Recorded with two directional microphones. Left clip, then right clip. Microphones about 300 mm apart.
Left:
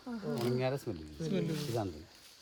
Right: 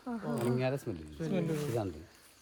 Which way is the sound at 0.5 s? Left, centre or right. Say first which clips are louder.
Right 1 dB; centre.